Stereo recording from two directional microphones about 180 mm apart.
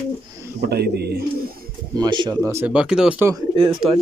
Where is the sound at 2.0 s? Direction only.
25° right (ahead or behind).